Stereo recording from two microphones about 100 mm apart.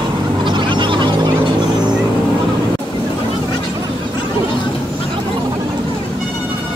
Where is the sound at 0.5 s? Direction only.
55° right (ahead or behind).